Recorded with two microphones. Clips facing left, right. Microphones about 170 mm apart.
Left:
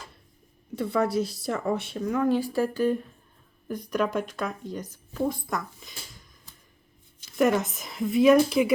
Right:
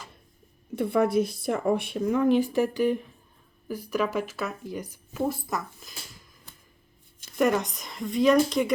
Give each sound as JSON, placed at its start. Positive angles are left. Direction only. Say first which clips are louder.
{"t": 0.9, "sound": "speech", "louder": "right 2 dB", "side_deg": -20}
{"t": 7.3, "sound": "speech", "louder": "left 1 dB", "side_deg": 0}